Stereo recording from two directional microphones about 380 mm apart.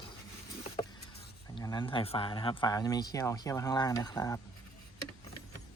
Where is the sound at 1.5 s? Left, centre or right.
Centre.